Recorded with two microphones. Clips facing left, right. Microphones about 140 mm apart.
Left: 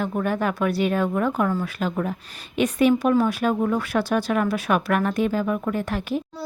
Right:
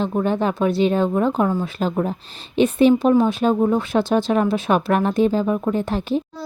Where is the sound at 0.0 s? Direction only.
25° right (ahead or behind).